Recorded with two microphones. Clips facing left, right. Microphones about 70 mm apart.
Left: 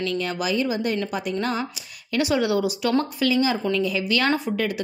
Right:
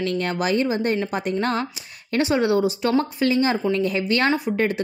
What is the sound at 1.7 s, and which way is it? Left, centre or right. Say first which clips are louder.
Speech: right 2 dB; right.